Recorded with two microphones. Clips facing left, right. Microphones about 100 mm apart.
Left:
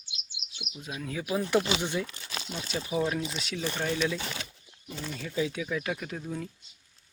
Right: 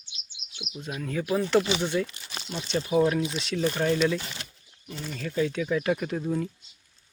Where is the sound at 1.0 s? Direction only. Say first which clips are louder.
Right 4 dB; 5° left (ahead or behind).